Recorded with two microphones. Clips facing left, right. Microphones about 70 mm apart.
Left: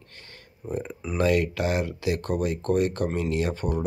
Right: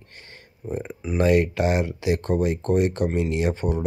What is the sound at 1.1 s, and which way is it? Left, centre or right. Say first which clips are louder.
Speech: right 3 dB; right.